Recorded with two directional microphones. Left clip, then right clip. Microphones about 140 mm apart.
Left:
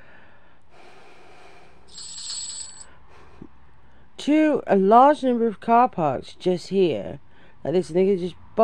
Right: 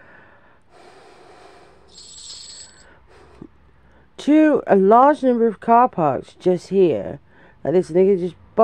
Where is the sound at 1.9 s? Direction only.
20° left (ahead or behind).